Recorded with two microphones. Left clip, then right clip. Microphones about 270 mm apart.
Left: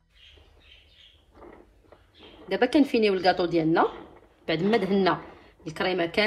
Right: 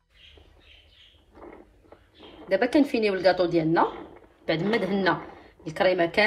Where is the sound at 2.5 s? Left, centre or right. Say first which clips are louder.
Even; left.